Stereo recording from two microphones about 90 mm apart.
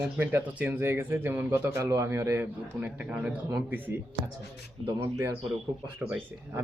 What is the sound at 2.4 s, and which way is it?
A man's voice, 15° right (ahead or behind).